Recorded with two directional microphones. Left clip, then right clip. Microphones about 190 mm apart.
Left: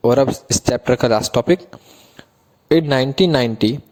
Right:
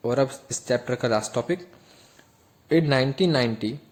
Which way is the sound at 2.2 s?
35° left (ahead or behind).